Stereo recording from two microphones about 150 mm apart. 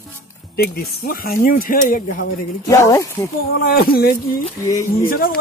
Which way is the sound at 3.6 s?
85° left.